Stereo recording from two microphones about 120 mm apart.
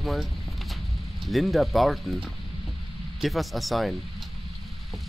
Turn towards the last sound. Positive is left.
turn(degrees=0)  # may be behind; listen again after turning